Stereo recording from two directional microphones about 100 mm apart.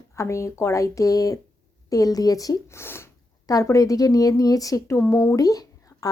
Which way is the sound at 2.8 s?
25° left (ahead or behind).